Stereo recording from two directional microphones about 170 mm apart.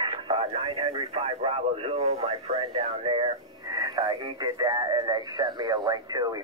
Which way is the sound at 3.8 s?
25° right (ahead or behind).